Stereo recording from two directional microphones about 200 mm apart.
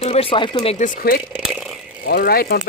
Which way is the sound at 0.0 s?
30° left (ahead or behind).